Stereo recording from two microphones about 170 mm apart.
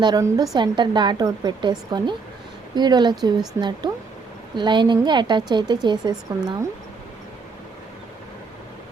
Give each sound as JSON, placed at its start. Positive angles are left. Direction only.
{"t": 0.0, "sound": "a woman's voice", "side_deg": -25}